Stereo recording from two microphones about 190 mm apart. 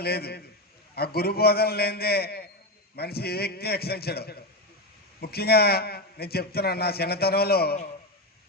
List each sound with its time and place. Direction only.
0.0 s a man's voice: 55° left (ahead or behind)